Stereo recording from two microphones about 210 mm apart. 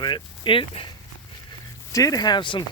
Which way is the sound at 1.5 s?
15° left (ahead or behind).